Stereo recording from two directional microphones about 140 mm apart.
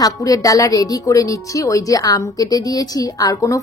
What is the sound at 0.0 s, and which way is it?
A woman's voice, 25° left (ahead or behind).